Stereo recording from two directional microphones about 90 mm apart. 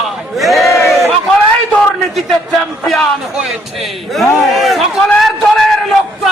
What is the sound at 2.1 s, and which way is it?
A man's voice, centre (ahead or behind).